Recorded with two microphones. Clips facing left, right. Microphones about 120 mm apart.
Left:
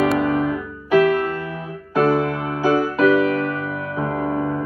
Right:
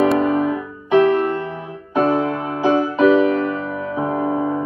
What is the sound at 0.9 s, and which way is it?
Music, 25° right (ahead or behind).